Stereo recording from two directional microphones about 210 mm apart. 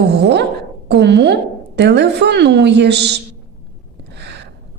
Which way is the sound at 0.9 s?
55° right (ahead or behind).